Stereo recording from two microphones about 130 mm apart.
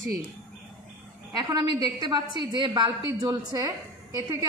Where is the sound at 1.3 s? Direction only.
30° right (ahead or behind).